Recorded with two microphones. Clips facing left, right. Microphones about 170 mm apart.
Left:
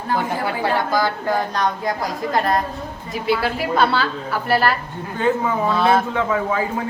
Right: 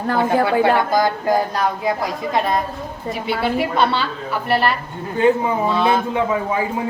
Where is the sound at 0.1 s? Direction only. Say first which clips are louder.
Right 5 dB; 60° right (ahead or behind).